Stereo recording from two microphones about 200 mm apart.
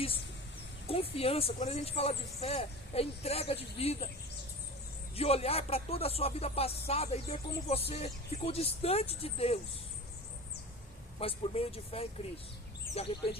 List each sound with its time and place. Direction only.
0.9 s speech: 30° left (ahead or behind)
5.1 s speech: 30° left (ahead or behind)
11.2 s speech: 30° left (ahead or behind)